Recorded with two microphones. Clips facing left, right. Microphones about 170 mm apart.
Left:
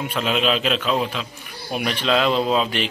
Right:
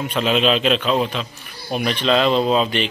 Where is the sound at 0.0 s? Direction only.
5° left (ahead or behind).